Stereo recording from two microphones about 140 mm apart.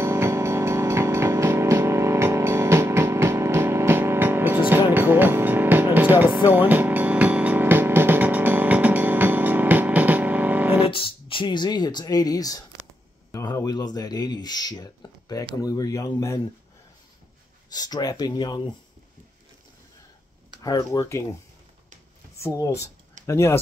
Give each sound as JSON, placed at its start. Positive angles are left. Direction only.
{"t": 0.0, "sound": "music", "side_deg": -20}
{"t": 10.9, "sound": "a sound", "side_deg": 40}
{"t": 13.3, "sound": "speech", "side_deg": 20}
{"t": 17.6, "sound": "speech", "side_deg": 30}
{"t": 20.6, "sound": "speech", "side_deg": 25}
{"t": 22.4, "sound": "speech", "side_deg": 20}